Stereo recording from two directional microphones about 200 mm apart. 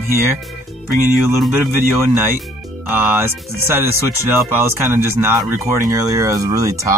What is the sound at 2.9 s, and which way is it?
Speech, 10° right (ahead or behind).